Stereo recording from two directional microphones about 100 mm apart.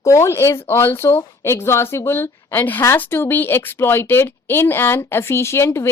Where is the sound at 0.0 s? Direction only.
30° left (ahead or behind).